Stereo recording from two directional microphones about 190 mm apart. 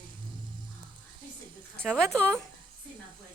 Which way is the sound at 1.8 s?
5° left (ahead or behind).